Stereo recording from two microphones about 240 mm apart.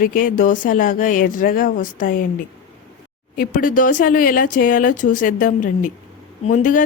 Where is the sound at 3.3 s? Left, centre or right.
Left.